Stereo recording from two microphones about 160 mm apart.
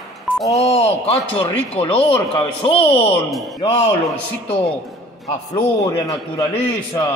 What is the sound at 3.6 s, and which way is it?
Speech, 35° left (ahead or behind).